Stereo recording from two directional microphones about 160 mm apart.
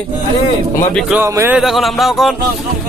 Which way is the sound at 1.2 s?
15° right (ahead or behind).